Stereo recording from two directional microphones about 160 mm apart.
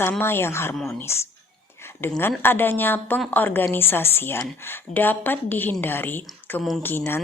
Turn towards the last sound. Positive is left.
turn(degrees=15)  # may be behind; listen again after turning